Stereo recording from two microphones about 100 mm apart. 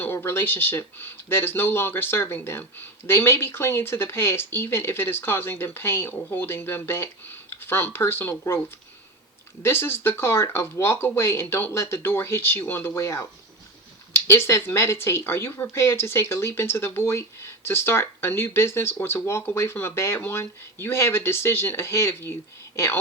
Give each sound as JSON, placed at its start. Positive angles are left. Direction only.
{"t": 0.0, "sound": "speech", "side_deg": 20}
{"t": 9.6, "sound": "speech", "side_deg": 25}
{"t": 14.3, "sound": "speech", "side_deg": 25}